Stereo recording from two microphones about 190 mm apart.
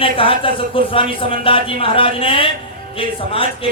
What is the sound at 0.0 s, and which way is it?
A man's voice, 30° left (ahead or behind).